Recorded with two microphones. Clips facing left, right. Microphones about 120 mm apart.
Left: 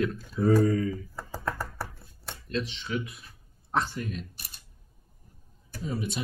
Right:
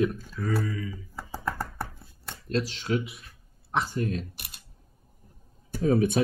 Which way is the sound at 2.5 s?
40° right (ahead or behind).